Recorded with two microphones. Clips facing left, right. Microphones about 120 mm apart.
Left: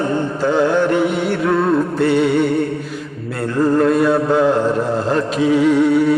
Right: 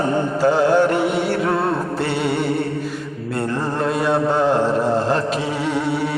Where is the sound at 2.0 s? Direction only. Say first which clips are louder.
Left 7 dB; centre (ahead or behind).